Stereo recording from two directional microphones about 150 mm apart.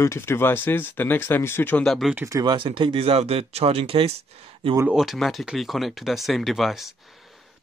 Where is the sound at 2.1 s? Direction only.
20° right (ahead or behind); by 4.2 s 40° right (ahead or behind).